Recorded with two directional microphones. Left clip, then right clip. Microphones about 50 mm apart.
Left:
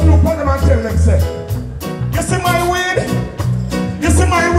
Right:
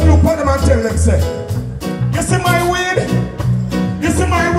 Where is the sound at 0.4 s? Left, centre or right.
Right.